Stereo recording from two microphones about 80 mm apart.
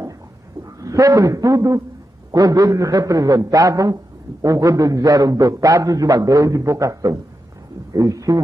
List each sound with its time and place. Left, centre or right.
0.7 s a man's voice: right